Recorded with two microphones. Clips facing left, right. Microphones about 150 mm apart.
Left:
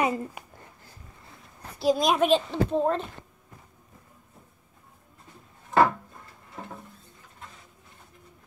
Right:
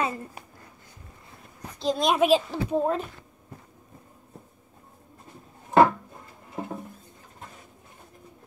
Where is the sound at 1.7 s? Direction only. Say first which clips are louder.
Left 1 dB; 5° left (ahead or behind).